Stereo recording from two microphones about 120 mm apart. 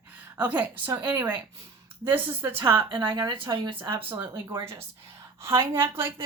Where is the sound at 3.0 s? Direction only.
30° right (ahead or behind).